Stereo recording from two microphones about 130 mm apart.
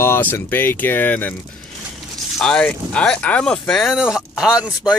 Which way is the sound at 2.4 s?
5° left (ahead or behind).